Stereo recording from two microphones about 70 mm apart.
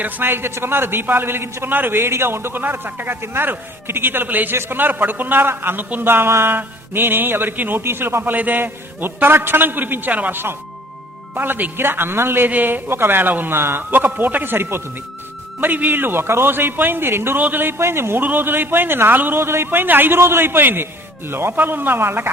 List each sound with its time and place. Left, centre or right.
0.0 s a man's voice: right